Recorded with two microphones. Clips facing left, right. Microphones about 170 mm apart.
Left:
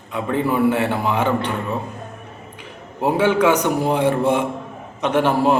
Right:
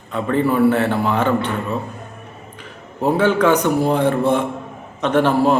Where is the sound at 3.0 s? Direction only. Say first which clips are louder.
Right 1 dB; 10° left (ahead or behind).